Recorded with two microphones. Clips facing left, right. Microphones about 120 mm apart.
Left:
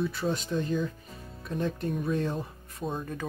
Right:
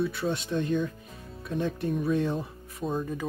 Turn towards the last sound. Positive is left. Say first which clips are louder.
# right 3 dB
turn(degrees=0)  # may be behind; listen again after turning